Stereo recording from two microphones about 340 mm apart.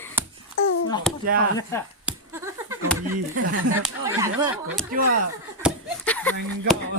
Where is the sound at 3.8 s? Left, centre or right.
Centre.